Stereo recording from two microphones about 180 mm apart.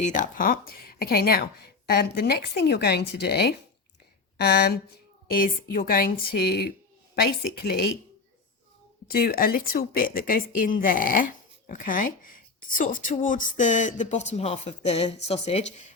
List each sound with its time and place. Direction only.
0.0 s speech: 45° left (ahead or behind); by 4.8 s 65° left (ahead or behind)
5.3 s a woman's voice: 50° left (ahead or behind)
9.1 s a woman's voice: 55° left (ahead or behind); by 15.6 s 35° left (ahead or behind)